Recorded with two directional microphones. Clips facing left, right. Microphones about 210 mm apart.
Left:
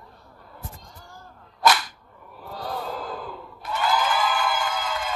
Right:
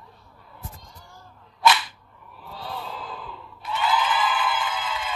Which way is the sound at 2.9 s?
45° left (ahead or behind).